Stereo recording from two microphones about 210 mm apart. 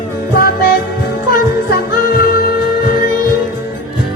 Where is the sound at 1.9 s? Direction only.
45° left (ahead or behind).